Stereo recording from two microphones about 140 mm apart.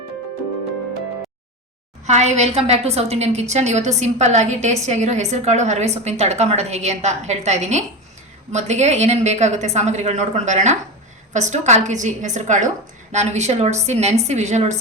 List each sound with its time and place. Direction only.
2.0 s a woman's voice: 55° right (ahead or behind)